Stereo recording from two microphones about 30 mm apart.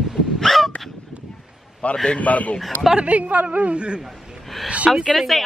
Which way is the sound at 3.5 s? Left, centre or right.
Right.